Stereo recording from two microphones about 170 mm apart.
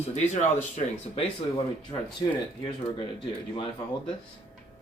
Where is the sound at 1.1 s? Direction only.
30° left (ahead or behind).